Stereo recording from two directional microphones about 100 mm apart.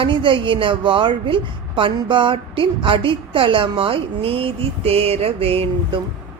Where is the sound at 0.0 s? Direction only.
55° right (ahead or behind).